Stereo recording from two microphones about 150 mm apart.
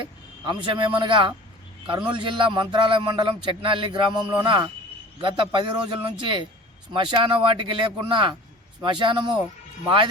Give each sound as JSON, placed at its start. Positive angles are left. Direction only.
{"t": 0.0, "sound": "speech", "side_deg": -30}